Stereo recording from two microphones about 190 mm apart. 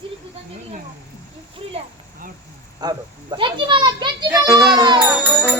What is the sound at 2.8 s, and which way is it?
A child's voice, 20° right (ahead or behind).